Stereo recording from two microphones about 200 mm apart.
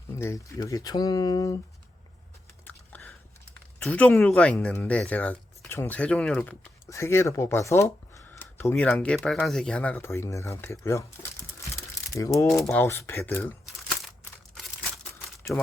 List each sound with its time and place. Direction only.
0.2 s speech: 15° left (ahead or behind)
2.6 s a sound: 10° left (ahead or behind)
3.8 s speech: 5° left (ahead or behind)
15.5 s speech: centre (ahead or behind)